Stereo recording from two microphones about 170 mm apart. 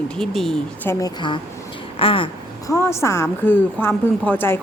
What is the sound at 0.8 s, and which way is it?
Speech, 25° left (ahead or behind).